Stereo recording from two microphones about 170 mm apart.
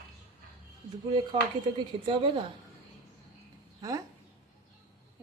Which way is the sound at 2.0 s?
30° right (ahead or behind).